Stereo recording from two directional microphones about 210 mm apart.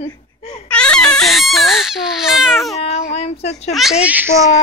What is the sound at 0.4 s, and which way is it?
Baby cry, 30° left (ahead or behind).